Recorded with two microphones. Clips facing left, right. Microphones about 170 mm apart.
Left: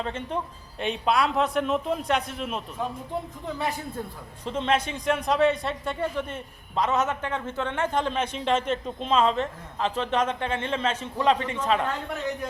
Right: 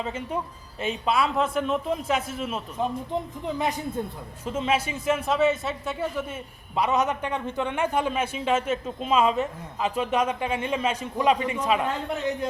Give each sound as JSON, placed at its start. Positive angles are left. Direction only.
{"t": 0.0, "sound": "a man's voice", "side_deg": -5}
{"t": 2.8, "sound": "a woman's voice", "side_deg": -20}
{"t": 4.4, "sound": "speech", "side_deg": -5}